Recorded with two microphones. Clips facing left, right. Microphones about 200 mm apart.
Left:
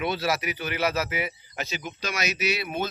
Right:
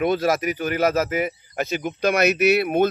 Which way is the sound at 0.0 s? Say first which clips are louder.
Right 7 dB; 50° right (ahead or behind).